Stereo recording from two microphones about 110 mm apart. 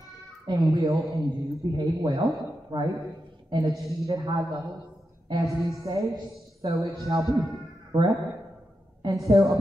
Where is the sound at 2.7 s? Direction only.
40° right (ahead or behind).